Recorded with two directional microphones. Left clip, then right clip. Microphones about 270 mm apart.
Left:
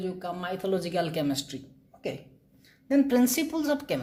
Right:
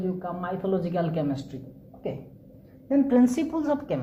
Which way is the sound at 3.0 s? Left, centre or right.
Left.